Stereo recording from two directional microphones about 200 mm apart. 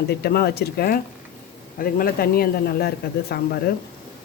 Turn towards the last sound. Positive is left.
turn(degrees=50)  # may be behind; listen again after turning